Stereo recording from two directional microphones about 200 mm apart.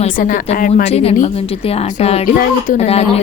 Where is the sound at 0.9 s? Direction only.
30° left (ahead or behind).